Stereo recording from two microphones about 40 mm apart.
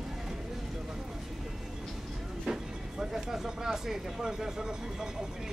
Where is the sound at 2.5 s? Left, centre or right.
Centre.